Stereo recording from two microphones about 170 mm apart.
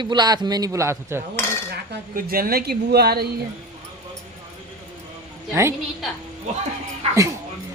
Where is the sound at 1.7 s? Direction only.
65° right (ahead or behind).